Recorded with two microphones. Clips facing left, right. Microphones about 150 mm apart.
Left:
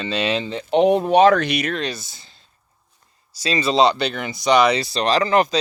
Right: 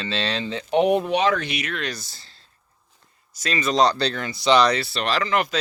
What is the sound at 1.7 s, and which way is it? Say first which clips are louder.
Speech: left 4 dB; 30° left (ahead or behind).